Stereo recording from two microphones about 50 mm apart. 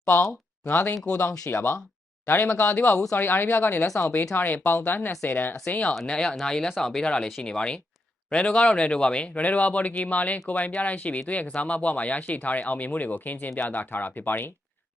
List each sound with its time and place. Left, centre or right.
0.7 s speech: left
1.0 s speech: left
1.5 s speech: left
3.8 s speech: left
4.4 s speech: left
5.6 s speech: left